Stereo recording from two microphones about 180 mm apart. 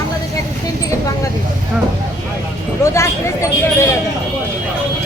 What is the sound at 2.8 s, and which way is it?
Speech, 15° left (ahead or behind).